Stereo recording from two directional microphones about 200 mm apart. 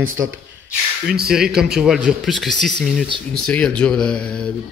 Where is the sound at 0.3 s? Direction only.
5° right (ahead or behind).